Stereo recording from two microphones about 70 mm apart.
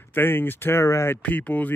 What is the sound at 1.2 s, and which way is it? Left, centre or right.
Speech, left.